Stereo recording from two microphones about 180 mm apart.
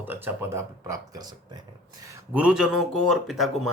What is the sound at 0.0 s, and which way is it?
Speech, 10° right (ahead or behind).